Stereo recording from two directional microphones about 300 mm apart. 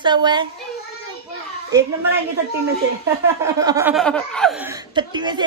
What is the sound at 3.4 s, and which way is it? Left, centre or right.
Speech, centre.